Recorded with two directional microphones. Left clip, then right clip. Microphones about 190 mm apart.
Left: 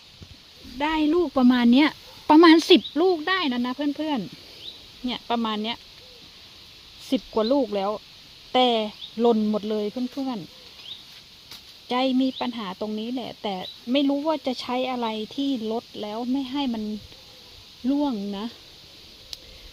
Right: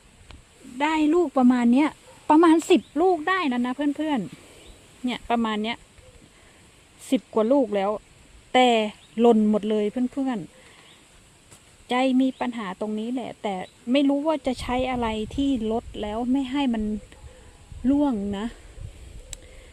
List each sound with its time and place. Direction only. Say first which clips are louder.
0.8 s speech: right 1 dB; 10° right (ahead or behind)
7.1 s speech: right 1 dB; 15° right (ahead or behind)
11.9 s speech: right 1 dB; 15° right (ahead or behind)
17.8 s speech: right 2 dB; 20° right (ahead or behind)